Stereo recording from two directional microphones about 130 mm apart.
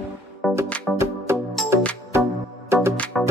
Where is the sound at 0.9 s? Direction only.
Centre (ahead or behind).